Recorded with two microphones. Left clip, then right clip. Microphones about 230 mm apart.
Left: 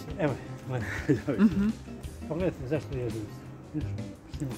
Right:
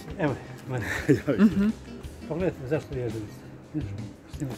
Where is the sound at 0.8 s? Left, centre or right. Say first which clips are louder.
Right 5 dB; right.